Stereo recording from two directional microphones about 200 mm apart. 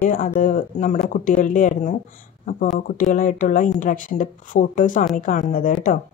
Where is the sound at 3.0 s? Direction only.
40° left (ahead or behind).